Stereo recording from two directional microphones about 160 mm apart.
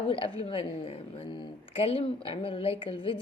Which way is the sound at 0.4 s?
35° left (ahead or behind).